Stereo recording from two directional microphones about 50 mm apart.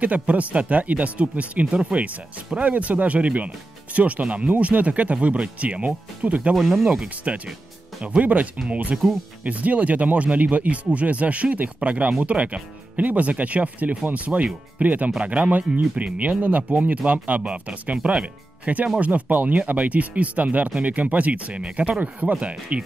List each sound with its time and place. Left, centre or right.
0.0 s speech: right
6.5 s speech: centre
7.3 s speech: right